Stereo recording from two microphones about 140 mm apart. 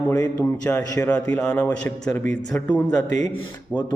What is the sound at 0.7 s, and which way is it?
Speech, 15° left (ahead or behind).